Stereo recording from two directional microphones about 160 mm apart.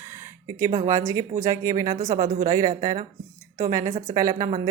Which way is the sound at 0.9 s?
20° right (ahead or behind).